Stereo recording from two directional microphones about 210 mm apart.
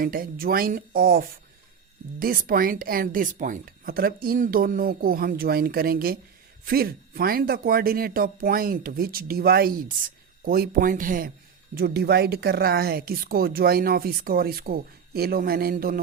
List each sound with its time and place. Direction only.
0.0 s speech: 45° right (ahead or behind)